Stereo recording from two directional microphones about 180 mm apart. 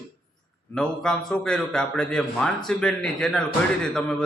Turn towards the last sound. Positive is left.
turn(degrees=5)  # may be behind; listen again after turning